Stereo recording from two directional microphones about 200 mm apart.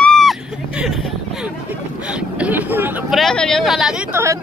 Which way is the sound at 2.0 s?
5° right (ahead or behind).